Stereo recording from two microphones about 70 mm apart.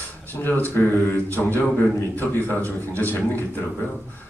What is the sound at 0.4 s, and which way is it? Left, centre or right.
Speech, left.